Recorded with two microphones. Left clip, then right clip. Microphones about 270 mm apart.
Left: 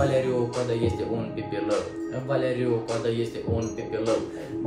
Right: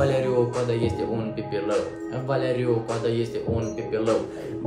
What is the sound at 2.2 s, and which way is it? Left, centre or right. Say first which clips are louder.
Speech: right 1 dB; centre.